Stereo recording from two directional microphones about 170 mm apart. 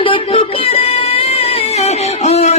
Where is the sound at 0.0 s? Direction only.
30° left (ahead or behind).